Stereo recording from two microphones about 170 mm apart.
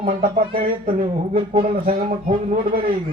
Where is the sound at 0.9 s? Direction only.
35° right (ahead or behind).